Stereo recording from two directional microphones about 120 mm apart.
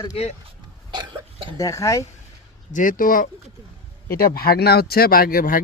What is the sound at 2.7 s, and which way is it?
Speech, 90° left.